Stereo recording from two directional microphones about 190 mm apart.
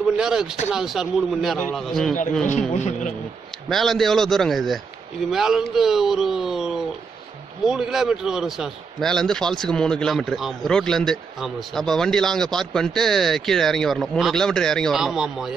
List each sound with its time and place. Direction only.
0.2 s a man's voice: 5° right (ahead or behind)
2.4 s a man's voice: 40° left (ahead or behind)
3.6 s a man's voice: centre (ahead or behind)